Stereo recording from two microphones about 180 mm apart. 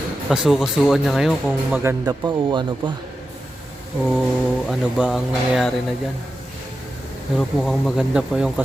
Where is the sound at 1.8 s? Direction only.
15° right (ahead or behind).